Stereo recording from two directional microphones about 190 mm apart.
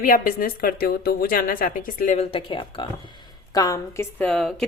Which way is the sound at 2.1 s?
30° left (ahead or behind).